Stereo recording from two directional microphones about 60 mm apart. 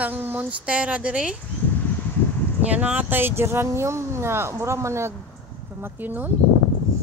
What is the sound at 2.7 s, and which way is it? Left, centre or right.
Speech, right.